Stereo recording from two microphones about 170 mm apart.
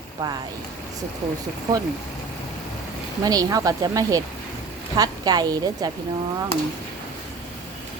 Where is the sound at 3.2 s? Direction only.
20° right (ahead or behind).